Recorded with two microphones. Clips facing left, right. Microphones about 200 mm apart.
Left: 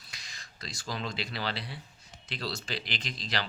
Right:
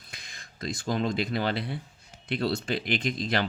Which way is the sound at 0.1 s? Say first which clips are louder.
Right 3 dB; 55° right (ahead or behind).